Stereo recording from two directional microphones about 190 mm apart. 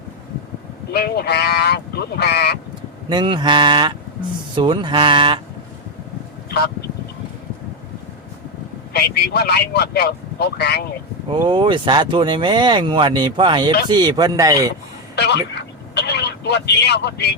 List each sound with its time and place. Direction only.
0.9 s speech: 55° left (ahead or behind)
3.1 s speech: 25° right (ahead or behind)
8.9 s speech: 60° left (ahead or behind)
11.3 s speech: 25° right (ahead or behind)
15.1 s vehicle: 65° left (ahead or behind)